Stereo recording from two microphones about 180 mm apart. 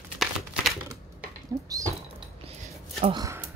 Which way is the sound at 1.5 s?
20° right (ahead or behind).